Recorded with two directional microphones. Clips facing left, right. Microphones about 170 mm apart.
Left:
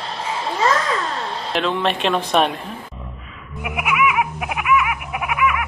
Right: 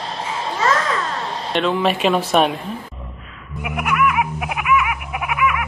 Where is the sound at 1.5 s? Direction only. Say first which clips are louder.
Right 2 dB; centre (ahead or behind).